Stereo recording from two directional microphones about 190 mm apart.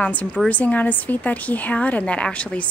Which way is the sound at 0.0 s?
5° left (ahead or behind).